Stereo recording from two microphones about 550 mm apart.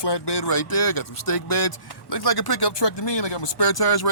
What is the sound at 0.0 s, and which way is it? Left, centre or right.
Speech, left.